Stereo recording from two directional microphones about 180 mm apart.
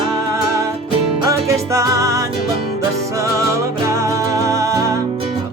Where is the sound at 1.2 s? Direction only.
15° right (ahead or behind).